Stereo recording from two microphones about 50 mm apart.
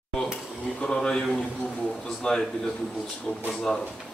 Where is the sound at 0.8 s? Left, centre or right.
Centre.